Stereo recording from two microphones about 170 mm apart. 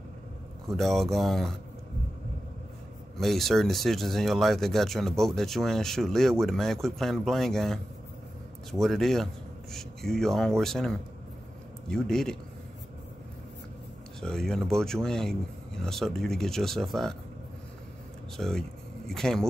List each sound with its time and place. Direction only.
0.7 s speech: centre (ahead or behind)
3.2 s speech: centre (ahead or behind)
14.2 s speech: 5° left (ahead or behind)
18.3 s speech: 5° left (ahead or behind)